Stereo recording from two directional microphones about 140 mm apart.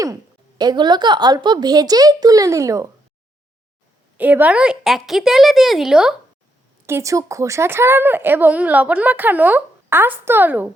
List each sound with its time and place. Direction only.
0.6 s a woman's voice: 30° right (ahead or behind)
4.2 s a woman's voice: 10° right (ahead or behind)
6.8 s speech: 20° right (ahead or behind)